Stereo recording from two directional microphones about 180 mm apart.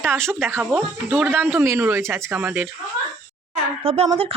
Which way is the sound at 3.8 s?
35° right (ahead or behind).